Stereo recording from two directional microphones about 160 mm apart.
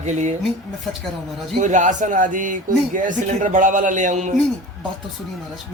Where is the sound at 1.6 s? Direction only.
50° right (ahead or behind).